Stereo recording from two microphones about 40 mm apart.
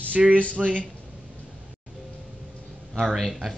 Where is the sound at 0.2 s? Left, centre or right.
Centre.